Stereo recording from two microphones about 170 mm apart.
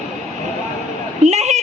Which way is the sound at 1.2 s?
40° right (ahead or behind).